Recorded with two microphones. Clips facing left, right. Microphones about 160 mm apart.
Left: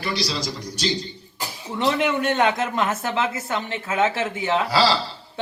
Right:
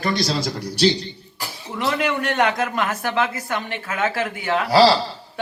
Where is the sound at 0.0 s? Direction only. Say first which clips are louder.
Right 4 dB; 50° right (ahead or behind).